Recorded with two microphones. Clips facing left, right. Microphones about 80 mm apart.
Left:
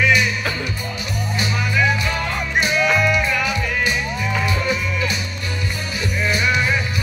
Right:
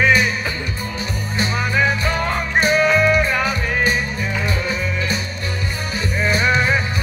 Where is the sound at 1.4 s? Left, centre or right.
Right.